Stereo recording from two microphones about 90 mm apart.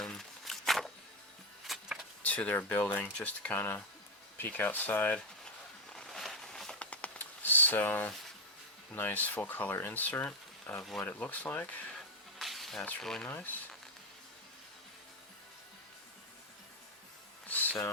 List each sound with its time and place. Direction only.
0.0 s walk: 5° left (ahead or behind)
1.6 s vehicle: 5° right (ahead or behind)
2.2 s speech: 15° left (ahead or behind)
5.9 s a sound: 5° left (ahead or behind)
8.9 s speech: 20° left (ahead or behind)
11.9 s a sound: centre (ahead or behind)
13.0 s speech: 5° left (ahead or behind)
13.2 s speech: 20° left (ahead or behind)
17.5 s a sound: 20° left (ahead or behind)